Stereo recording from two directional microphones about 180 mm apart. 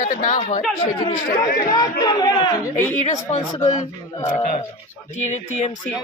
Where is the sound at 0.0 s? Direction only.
50° left (ahead or behind).